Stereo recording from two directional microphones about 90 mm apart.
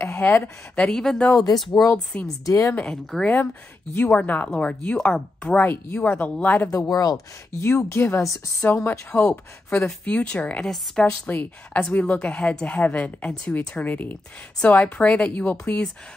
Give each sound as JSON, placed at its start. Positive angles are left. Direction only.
{"t": 0.1, "sound": "a sound", "side_deg": 25}
{"t": 0.7, "sound": "a woman's voice", "side_deg": 10}
{"t": 1.3, "sound": "speech", "side_deg": 45}
{"t": 2.7, "sound": "a woman's voice", "side_deg": 15}
{"t": 5.7, "sound": "speech", "side_deg": 30}
{"t": 6.0, "sound": "a woman's voice", "side_deg": 15}
{"t": 6.7, "sound": "speech", "side_deg": 40}
{"t": 7.6, "sound": "speech", "side_deg": 25}
{"t": 8.6, "sound": "a woman's voice", "side_deg": 20}